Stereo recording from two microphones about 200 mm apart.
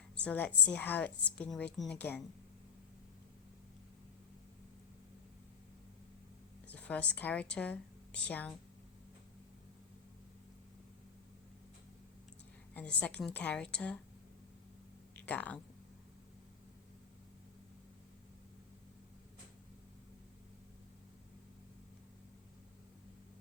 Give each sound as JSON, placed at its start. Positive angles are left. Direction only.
{"t": 0.2, "sound": "a woman's voice", "side_deg": 5}
{"t": 6.7, "sound": "a woman's voice", "side_deg": 5}
{"t": 12.7, "sound": "a woman's voice", "side_deg": 5}
{"t": 15.1, "sound": "speech", "side_deg": 5}